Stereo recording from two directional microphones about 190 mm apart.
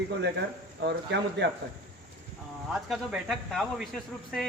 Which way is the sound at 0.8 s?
65° right (ahead or behind).